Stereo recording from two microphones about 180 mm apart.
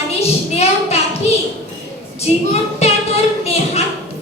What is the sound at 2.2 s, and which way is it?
Speech, 35° left (ahead or behind).